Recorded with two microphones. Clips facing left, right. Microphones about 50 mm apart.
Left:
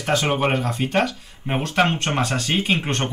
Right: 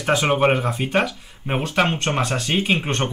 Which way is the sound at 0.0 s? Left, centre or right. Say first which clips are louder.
Right 3 dB; centre.